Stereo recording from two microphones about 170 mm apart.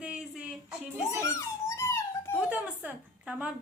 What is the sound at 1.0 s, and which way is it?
Giggle, 20° left (ahead or behind).